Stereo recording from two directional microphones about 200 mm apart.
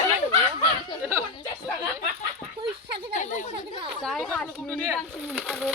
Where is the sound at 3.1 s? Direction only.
40° left (ahead or behind).